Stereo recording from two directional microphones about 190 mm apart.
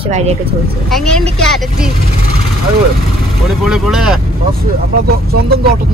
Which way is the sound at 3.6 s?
Centre (ahead or behind).